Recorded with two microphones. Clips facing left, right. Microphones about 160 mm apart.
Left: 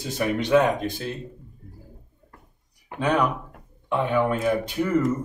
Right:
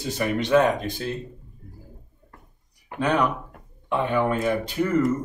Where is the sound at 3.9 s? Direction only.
5° left (ahead or behind).